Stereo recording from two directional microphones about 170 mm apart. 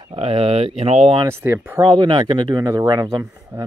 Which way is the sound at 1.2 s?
15° right (ahead or behind).